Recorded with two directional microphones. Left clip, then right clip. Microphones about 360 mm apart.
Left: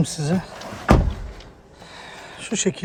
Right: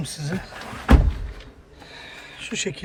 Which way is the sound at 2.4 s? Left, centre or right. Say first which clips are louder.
Left 4 dB; centre.